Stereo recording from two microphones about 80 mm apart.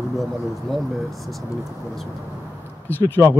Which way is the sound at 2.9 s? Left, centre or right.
Left.